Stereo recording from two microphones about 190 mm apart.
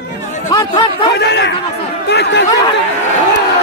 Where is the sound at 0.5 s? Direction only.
20° left (ahead or behind).